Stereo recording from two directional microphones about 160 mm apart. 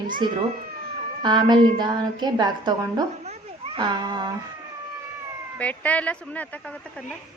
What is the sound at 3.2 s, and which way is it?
Children playing, 35° right (ahead or behind).